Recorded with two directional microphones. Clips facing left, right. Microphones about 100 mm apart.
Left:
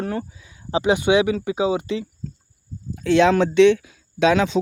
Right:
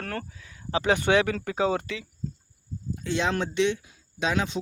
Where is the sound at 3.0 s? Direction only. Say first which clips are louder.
Left 11 dB; 90° left.